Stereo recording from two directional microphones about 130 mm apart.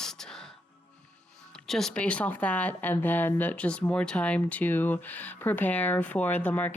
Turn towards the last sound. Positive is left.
turn(degrees=10)  # may be behind; listen again after turning